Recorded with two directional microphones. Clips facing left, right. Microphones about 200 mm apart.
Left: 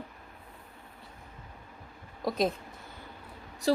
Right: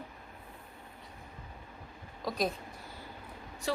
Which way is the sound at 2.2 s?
25° left (ahead or behind).